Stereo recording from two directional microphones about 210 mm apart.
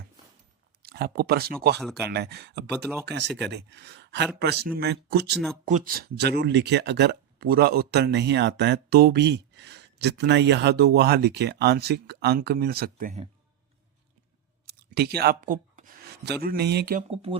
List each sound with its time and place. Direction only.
0.8 s speech: 45° right (ahead or behind)
5.3 s speech: centre (ahead or behind)
5.6 s speech: 40° right (ahead or behind)
14.7 s speech: 50° right (ahead or behind)